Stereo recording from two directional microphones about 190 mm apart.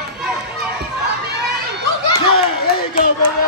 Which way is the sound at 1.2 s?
60° right (ahead or behind).